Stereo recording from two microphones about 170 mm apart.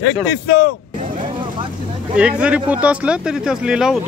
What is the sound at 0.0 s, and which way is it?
Speech, 85° left.